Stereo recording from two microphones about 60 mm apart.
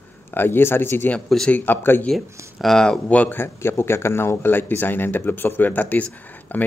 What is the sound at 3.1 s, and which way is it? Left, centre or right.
Speech, left.